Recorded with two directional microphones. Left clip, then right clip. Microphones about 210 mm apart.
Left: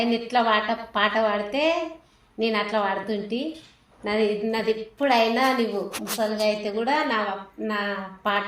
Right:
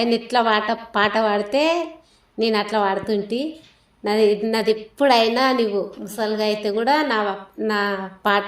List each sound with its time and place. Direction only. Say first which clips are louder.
0.0 s a woman's voice: right 3 dB; 55° right (ahead or behind)